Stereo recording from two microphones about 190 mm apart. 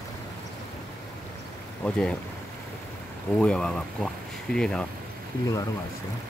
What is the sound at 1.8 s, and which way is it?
Speech, 5° left (ahead or behind).